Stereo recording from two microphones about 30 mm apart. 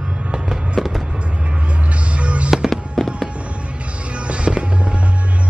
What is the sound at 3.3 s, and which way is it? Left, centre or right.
Music, right.